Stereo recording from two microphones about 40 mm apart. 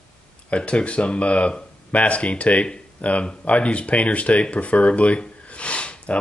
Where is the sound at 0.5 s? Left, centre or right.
Left.